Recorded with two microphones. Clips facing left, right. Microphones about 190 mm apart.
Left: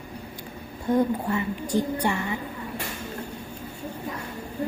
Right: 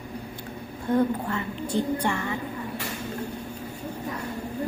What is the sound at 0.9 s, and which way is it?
A woman's voice, 15° left (ahead or behind).